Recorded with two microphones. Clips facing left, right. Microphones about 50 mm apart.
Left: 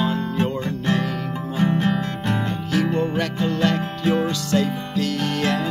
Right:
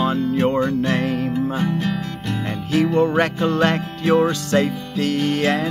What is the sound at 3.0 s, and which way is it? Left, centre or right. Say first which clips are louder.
Music: right 5 dB; right.